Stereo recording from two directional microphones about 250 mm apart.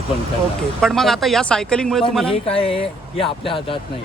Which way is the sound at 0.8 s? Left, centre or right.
Centre.